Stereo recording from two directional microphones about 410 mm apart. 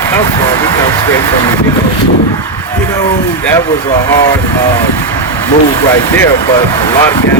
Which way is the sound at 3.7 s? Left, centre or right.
Centre.